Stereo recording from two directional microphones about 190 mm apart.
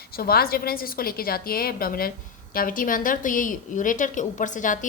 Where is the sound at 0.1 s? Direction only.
55° left (ahead or behind).